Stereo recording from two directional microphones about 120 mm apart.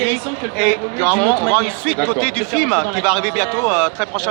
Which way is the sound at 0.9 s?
20° left (ahead or behind).